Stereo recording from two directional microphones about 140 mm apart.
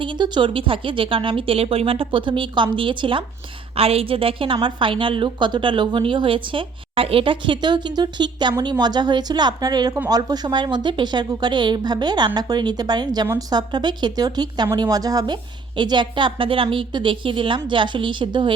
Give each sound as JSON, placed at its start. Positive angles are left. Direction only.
{"t": 0.0, "sound": "a woman's voice", "side_deg": -35}